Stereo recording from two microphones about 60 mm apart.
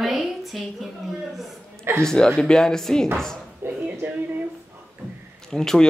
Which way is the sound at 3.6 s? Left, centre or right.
Right.